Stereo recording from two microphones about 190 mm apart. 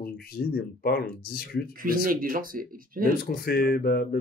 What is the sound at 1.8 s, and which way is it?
Speech, 45° right (ahead or behind).